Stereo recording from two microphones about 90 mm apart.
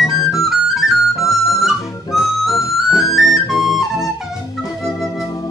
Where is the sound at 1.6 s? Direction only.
Centre (ahead or behind).